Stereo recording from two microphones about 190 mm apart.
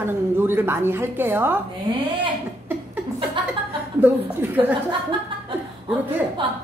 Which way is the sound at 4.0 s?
10° right (ahead or behind).